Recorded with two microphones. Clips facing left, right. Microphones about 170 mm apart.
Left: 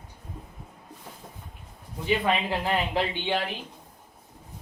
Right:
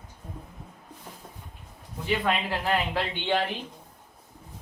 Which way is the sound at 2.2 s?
20° left (ahead or behind).